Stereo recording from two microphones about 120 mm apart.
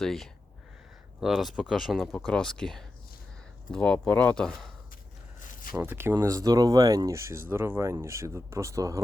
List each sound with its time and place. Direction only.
0.0 s speech: 5° left (ahead or behind)
5.7 s speech: 15° right (ahead or behind)